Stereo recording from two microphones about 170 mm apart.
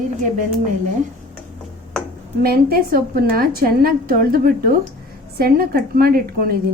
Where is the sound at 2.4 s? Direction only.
65° right (ahead or behind).